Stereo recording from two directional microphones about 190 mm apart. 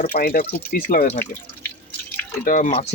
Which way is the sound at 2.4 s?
40° left (ahead or behind).